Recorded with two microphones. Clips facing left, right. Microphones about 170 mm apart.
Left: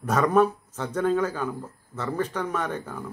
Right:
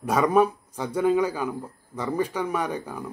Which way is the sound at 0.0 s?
10° right (ahead or behind).